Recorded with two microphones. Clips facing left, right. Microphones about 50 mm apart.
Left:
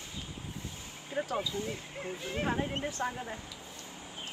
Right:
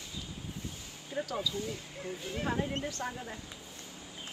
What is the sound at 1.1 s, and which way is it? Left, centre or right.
Speech, left.